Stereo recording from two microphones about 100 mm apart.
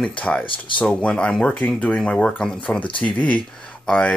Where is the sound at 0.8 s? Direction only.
10° left (ahead or behind).